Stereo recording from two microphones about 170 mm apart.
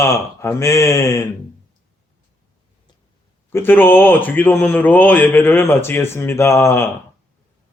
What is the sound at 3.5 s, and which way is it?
A man's voice, 10° left (ahead or behind).